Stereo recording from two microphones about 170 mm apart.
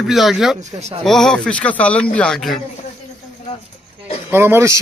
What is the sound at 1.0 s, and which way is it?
A man's voice, 5° left (ahead or behind).